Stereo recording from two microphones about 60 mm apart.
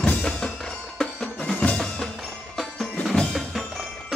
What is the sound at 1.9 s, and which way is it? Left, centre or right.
Music, centre.